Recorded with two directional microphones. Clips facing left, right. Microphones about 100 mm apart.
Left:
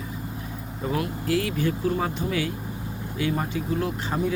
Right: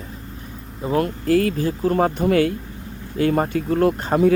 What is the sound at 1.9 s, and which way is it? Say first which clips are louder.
Speech: right 9 dB; 55° right (ahead or behind).